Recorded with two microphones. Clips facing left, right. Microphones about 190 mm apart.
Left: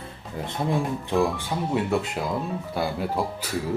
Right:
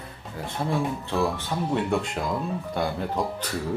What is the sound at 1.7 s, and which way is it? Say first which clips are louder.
Speech: left 1 dB; 5° left (ahead or behind).